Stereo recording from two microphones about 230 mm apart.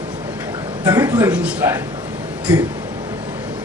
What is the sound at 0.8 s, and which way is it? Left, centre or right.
Speech, centre.